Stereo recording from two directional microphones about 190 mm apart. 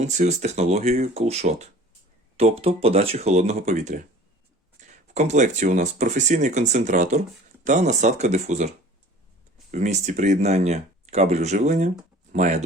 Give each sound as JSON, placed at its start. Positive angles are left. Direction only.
{"t": 0.0, "sound": "speech", "side_deg": -35}
{"t": 9.7, "sound": "speech", "side_deg": -40}